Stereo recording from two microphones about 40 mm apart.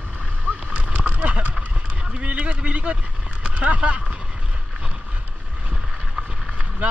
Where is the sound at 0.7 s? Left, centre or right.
Right.